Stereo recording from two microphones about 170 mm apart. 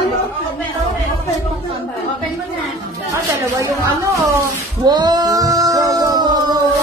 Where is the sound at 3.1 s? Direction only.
15° right (ahead or behind).